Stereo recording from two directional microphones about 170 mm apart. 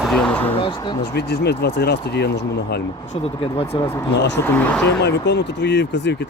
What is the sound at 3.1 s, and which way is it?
Speech, 35° left (ahead or behind).